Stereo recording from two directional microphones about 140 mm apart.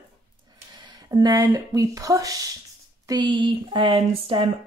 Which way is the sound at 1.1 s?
25° right (ahead or behind).